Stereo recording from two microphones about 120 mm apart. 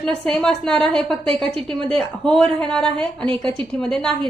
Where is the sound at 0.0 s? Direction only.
5° left (ahead or behind).